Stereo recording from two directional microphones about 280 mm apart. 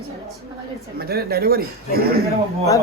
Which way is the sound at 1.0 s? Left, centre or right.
Right.